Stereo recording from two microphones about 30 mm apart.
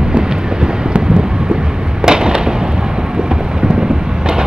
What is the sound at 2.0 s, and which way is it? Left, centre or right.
Fireworks, right.